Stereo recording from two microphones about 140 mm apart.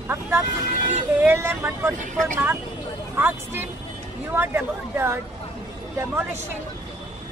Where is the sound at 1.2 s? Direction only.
15° right (ahead or behind).